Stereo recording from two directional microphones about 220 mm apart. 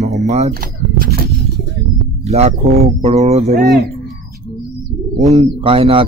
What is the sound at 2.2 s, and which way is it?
A man's voice, 30° right (ahead or behind).